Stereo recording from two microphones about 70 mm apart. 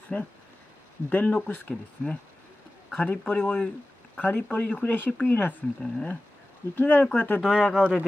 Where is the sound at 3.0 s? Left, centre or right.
Left.